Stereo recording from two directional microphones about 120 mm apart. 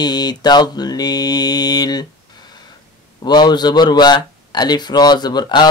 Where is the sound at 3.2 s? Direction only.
35° left (ahead or behind).